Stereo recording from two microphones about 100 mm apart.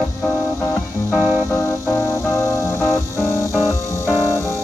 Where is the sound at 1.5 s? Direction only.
30° left (ahead or behind).